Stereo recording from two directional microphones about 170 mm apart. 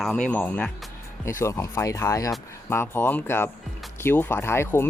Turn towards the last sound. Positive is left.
turn(degrees=15)  # may be behind; listen again after turning